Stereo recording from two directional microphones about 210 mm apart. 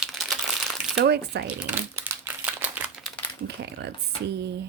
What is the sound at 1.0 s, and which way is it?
Speech, 50° right (ahead or behind).